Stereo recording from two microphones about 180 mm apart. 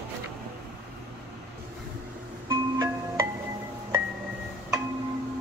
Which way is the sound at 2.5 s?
20° right (ahead or behind).